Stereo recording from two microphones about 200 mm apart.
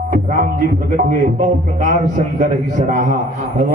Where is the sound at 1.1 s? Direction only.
40° right (ahead or behind).